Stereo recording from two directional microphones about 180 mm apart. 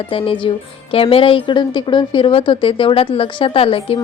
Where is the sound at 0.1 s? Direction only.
30° left (ahead or behind).